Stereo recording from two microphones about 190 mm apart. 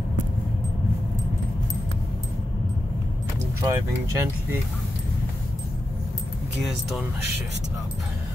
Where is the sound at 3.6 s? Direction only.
15° right (ahead or behind).